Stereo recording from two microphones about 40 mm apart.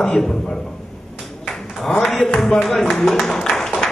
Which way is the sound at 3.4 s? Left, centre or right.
Centre.